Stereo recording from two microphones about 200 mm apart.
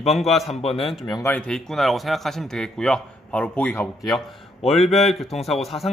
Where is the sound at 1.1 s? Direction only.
15° left (ahead or behind).